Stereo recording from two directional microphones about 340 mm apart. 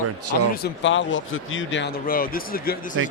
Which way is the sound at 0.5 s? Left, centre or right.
Left.